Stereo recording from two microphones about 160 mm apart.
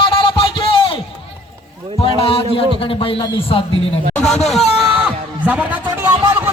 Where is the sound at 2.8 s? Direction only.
35° left (ahead or behind).